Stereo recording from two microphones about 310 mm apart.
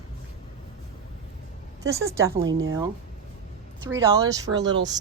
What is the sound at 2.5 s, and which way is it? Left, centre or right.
Speech, right.